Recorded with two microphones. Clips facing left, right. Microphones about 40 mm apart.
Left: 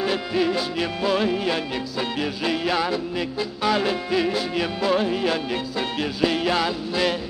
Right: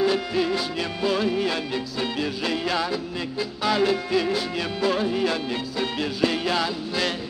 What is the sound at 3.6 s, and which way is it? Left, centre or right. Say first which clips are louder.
Music: even; centre.